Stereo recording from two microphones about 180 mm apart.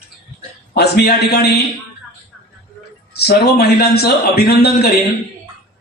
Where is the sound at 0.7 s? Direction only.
65° left (ahead or behind).